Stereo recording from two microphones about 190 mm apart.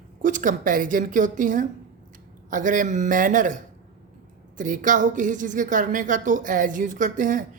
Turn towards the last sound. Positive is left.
turn(degrees=-45)  # may be behind; listen again after turning